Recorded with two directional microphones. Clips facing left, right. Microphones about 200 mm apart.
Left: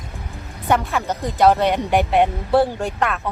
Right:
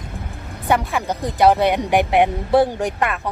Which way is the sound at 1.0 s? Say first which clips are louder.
Right 1 dB; 15° right (ahead or behind).